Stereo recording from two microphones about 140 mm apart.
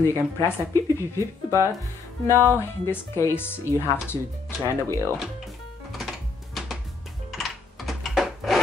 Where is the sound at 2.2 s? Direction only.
20° right (ahead or behind).